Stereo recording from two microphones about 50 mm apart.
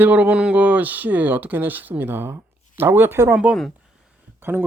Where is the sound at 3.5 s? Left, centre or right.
Right.